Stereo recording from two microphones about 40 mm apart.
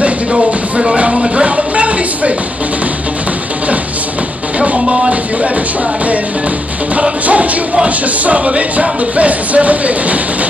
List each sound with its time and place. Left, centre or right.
0.5 s music: right
1.3 s a sound: right
4.6 s music: right
7.0 s music: right